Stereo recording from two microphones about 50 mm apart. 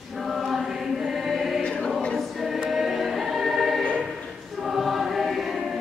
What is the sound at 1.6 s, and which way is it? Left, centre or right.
Choir, left.